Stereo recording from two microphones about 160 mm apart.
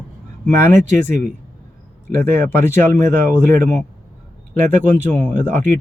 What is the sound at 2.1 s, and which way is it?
Speech, 15° left (ahead or behind).